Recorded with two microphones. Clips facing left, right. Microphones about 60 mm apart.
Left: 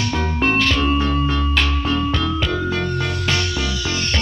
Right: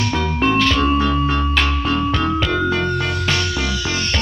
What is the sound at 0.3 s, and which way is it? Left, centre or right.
Music, right.